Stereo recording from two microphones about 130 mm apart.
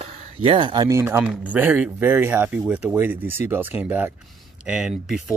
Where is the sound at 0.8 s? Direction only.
20° right (ahead or behind).